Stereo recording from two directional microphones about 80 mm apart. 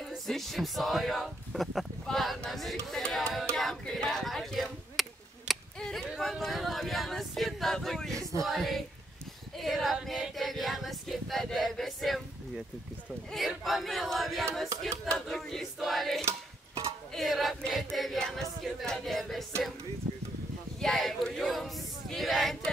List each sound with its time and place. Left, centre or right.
0.3 s speech: centre
2.9 s music: centre
3.5 s speech: centre
5.8 s a sound: centre
6.0 s a sound: centre
8.2 s music: right
8.5 s speech: centre
9.6 s female singing: centre
13.5 s speech: centre
20.8 s speech: centre